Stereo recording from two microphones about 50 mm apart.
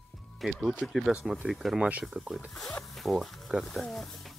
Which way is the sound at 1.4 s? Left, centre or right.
Centre.